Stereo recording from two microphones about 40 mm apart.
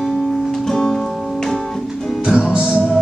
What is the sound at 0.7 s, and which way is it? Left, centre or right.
Music, centre.